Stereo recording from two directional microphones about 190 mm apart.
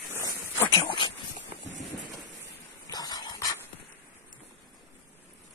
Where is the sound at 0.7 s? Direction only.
25° left (ahead or behind).